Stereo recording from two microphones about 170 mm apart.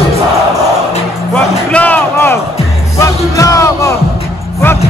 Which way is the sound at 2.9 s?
20° left (ahead or behind).